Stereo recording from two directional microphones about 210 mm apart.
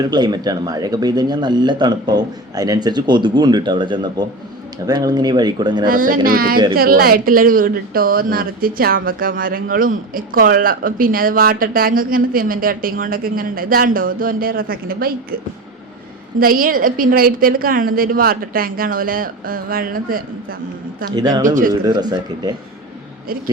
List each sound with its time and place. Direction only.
0.1 s speech: 20° right (ahead or behind)
5.8 s a woman's voice: 40° right (ahead or behind)
16.4 s a woman's voice: 45° right (ahead or behind)
21.2 s speech: 20° right (ahead or behind)